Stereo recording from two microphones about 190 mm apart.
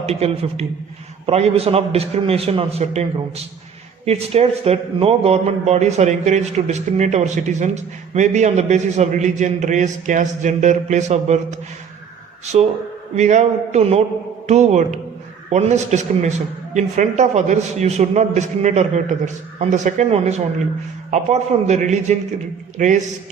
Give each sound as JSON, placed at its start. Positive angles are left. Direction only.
{"t": 0.0, "sound": "a man's voice", "side_deg": -35}
{"t": 13.1, "sound": "a man's voice", "side_deg": -40}